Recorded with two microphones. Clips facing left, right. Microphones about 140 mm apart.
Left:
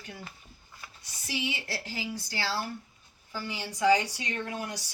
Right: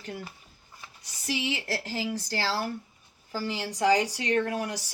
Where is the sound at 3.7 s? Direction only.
35° right (ahead or behind).